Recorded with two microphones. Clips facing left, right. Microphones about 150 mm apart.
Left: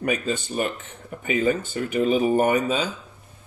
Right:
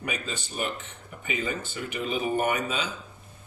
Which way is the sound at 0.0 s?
50° left (ahead or behind).